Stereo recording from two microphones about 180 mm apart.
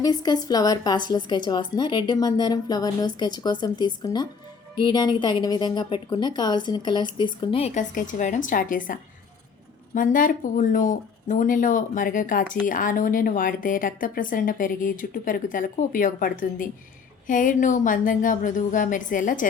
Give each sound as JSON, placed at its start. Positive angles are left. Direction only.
{"t": 0.0, "sound": "a woman's voice", "side_deg": 20}